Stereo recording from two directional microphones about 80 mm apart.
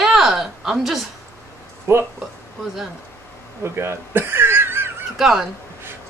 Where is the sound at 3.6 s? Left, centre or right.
Right.